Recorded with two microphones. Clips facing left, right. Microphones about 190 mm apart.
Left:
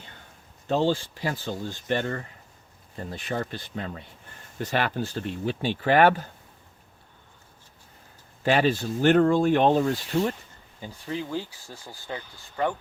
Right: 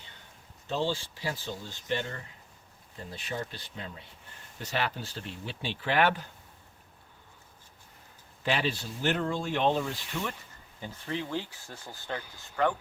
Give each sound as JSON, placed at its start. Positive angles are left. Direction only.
{"t": 0.7, "sound": "speech", "side_deg": 50}
{"t": 8.4, "sound": "speech", "side_deg": 50}
{"t": 10.8, "sound": "speech", "side_deg": 10}